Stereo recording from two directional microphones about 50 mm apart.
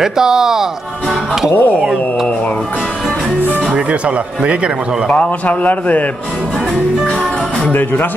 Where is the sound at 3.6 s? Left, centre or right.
Right.